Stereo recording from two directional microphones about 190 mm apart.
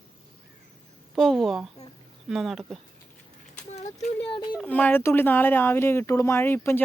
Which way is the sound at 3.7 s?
35° left (ahead or behind).